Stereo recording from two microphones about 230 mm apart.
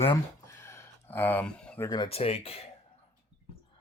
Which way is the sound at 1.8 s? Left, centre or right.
Centre.